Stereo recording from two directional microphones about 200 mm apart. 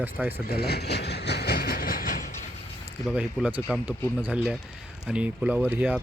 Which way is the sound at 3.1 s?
5° right (ahead or behind).